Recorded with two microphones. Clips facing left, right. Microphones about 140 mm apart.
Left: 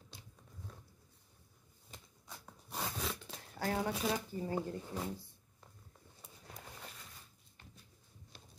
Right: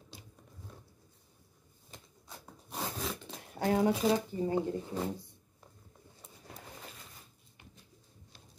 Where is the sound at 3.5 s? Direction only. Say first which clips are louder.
Right 8 dB; 20° right (ahead or behind).